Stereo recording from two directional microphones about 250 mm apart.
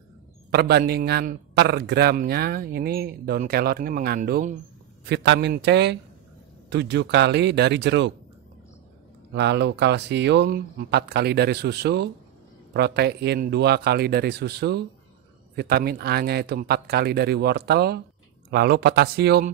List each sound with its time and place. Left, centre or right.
0.5 s speech: right
9.3 s speech: right